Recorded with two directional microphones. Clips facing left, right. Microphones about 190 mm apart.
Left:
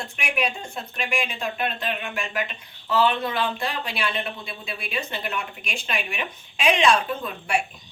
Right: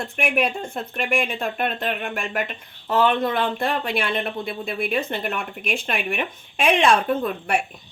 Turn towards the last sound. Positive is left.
turn(degrees=-55)  # may be behind; listen again after turning